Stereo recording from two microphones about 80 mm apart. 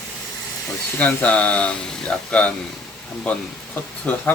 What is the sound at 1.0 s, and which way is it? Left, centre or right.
Speech, centre.